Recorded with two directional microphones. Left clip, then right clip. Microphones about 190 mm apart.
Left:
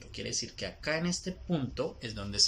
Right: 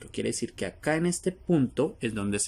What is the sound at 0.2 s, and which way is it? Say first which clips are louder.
Speech: right 5 dB; 55° right (ahead or behind).